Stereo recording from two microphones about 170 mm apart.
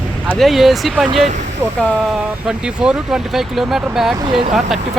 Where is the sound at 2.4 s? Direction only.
5° right (ahead or behind).